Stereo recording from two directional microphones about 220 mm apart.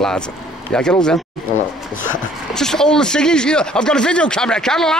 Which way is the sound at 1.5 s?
35° left (ahead or behind).